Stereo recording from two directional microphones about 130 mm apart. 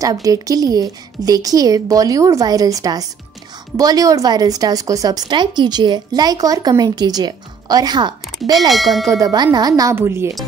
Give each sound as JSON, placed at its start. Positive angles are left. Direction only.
{"t": 0.0, "sound": "a woman's voice", "side_deg": -25}
{"t": 8.6, "sound": "ding", "side_deg": 0}
{"t": 9.1, "sound": "a woman's voice", "side_deg": -30}